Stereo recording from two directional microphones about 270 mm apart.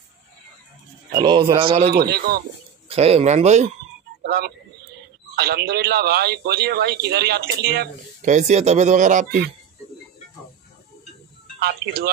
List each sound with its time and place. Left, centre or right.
1.1 s speech: centre
1.9 s a man's voice: right
2.9 s speech: right
4.2 s a sound: right
5.3 s a man's voice: right
11.6 s a man's voice: right